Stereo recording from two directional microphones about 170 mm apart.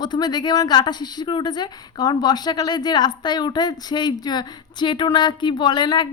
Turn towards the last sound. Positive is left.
turn(degrees=25)  # may be behind; listen again after turning